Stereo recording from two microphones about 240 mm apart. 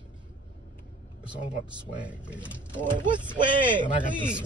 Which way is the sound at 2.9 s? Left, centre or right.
Centre.